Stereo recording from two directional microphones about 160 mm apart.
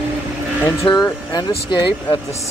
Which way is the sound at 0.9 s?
25° left (ahead or behind).